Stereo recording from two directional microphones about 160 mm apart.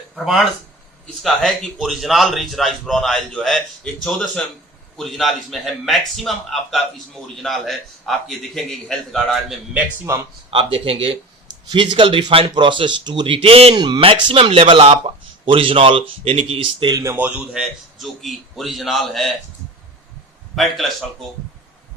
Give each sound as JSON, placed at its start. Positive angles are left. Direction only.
{"t": 1.2, "sound": "a man's voice", "side_deg": 0}
{"t": 10.5, "sound": "speech", "side_deg": -35}
{"t": 16.9, "sound": "a man's voice", "side_deg": -20}
{"t": 20.6, "sound": "a man's voice", "side_deg": 0}